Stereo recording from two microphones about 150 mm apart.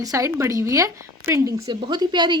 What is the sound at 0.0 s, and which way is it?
A woman's voice, 20° right (ahead or behind).